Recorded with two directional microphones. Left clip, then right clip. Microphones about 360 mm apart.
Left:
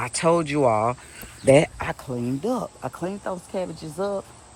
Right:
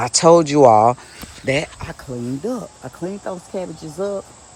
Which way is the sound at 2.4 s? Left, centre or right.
Centre.